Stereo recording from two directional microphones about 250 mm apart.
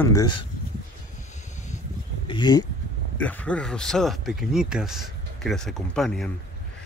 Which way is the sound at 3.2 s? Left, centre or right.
Centre.